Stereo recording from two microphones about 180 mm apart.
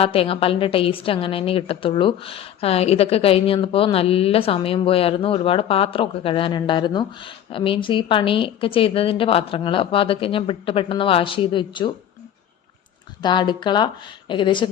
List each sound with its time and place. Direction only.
0.0 s a woman's voice: 30° left (ahead or behind)
13.2 s a woman's voice: 25° left (ahead or behind)